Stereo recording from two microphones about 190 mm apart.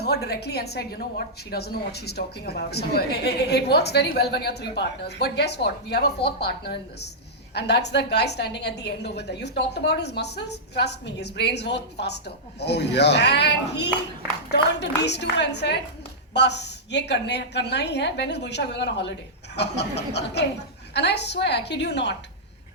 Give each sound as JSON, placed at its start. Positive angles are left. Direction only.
{"t": 0.0, "sound": "a woman's voice", "side_deg": 60}